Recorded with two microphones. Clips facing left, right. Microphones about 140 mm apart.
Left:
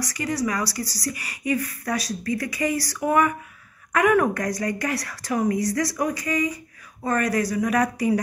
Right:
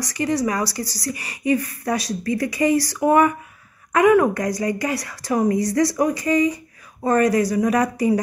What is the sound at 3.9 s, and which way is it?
Speech, 20° right (ahead or behind).